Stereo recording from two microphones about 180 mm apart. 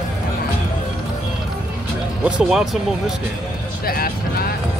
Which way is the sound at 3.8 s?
55° left (ahead or behind).